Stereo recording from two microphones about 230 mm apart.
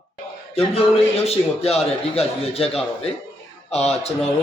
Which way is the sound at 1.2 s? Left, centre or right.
Left.